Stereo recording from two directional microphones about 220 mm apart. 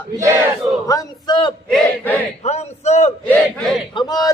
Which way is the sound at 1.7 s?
5° left (ahead or behind).